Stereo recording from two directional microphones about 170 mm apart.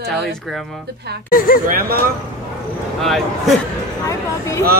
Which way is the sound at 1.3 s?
55° left (ahead or behind).